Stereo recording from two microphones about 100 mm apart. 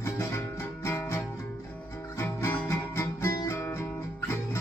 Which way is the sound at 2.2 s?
25° left (ahead or behind).